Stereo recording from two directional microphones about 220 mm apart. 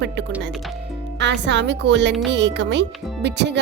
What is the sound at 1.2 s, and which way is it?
Speech, 55° right (ahead or behind).